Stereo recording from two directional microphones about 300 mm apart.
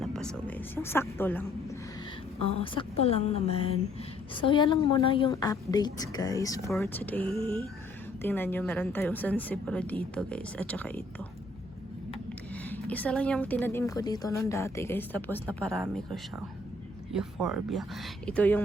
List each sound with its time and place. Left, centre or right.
0.0 s a woman's voice: centre
2.4 s a woman's voice: centre
12.6 s a woman's voice: centre